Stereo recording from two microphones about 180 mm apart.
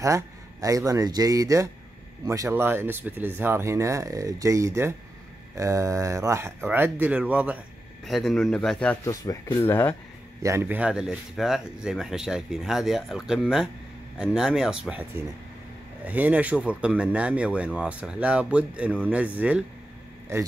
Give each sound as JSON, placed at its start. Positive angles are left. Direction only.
{"t": 0.0, "sound": "speech", "side_deg": -15}
{"t": 9.0, "sound": "speech", "side_deg": 20}
{"t": 10.4, "sound": "speech", "side_deg": -15}